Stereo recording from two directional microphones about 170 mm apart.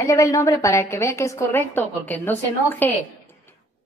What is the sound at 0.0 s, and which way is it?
A woman's voice, 20° left (ahead or behind).